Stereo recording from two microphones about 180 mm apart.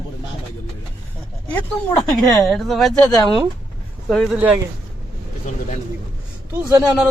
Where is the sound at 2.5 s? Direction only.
Centre (ahead or behind).